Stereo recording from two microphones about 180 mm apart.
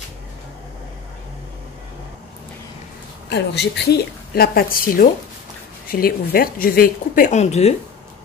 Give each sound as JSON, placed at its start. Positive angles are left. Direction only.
{"t": 3.3, "sound": "a woman's voice", "side_deg": 70}